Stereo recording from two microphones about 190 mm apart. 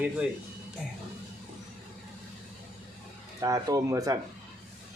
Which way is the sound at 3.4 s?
20° right (ahead or behind).